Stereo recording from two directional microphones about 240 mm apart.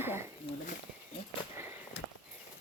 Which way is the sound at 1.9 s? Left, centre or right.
Left.